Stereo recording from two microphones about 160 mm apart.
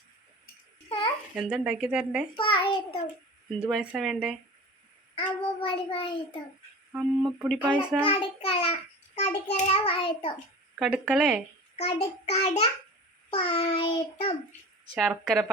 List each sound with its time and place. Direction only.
0.9 s babbling: 35° left (ahead or behind)
1.4 s speech: 5° right (ahead or behind)
2.3 s a child's voice: 35° left (ahead or behind)
3.6 s speech: 5° right (ahead or behind)
5.1 s a child's voice: 35° left (ahead or behind)
6.9 s speech: 5° right (ahead or behind)
8.0 s a child's voice: 35° left (ahead or behind)
10.8 s speech: 5° right (ahead or behind)
11.8 s a child's voice: 40° left (ahead or behind)
14.9 s speech: 5° right (ahead or behind)